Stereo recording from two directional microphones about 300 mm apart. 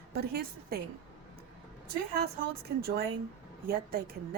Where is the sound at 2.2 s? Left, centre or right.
Right.